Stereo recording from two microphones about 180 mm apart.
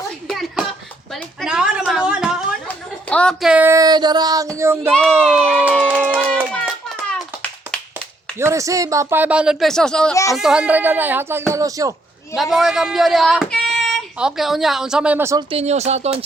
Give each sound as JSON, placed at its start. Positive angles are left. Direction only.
{"t": 0.3, "sound": "a sound", "side_deg": 0}
{"t": 3.5, "sound": "speech", "side_deg": -15}
{"t": 5.6, "sound": "a sound", "side_deg": 10}
{"t": 5.9, "sound": "run", "side_deg": -10}
{"t": 6.1, "sound": "rattle", "side_deg": 5}
{"t": 8.4, "sound": "speech", "side_deg": -15}
{"t": 12.3, "sound": "speech", "side_deg": 0}
{"t": 15.4, "sound": "speech", "side_deg": -35}